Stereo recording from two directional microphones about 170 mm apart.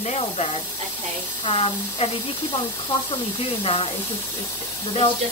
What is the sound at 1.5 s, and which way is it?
Speech, 35° left (ahead or behind).